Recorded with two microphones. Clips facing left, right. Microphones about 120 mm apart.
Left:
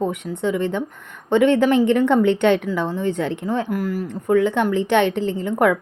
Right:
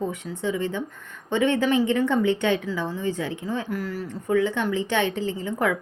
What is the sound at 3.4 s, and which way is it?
A woman's voice, 50° left (ahead or behind).